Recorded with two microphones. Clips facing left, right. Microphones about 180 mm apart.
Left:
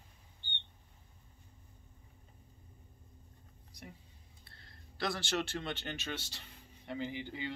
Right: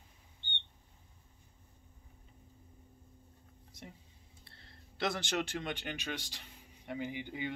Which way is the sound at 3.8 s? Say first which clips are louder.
Right 1 dB; 25° right (ahead or behind).